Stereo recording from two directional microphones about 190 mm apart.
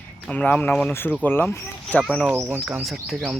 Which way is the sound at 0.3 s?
10° left (ahead or behind).